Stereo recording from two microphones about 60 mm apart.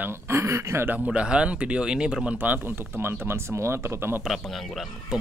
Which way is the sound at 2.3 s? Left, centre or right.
Right.